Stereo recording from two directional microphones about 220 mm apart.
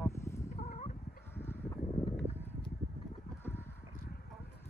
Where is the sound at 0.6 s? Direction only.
30° left (ahead or behind).